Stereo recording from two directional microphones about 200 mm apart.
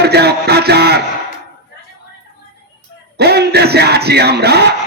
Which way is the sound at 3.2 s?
55° right (ahead or behind).